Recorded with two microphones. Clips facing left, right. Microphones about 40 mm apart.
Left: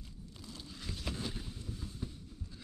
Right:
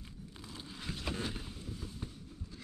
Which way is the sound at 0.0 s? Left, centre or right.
Right.